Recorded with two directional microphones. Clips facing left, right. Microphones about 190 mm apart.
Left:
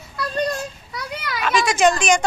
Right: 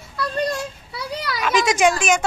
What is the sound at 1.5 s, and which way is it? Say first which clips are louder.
Speech: even; 15° right (ahead or behind).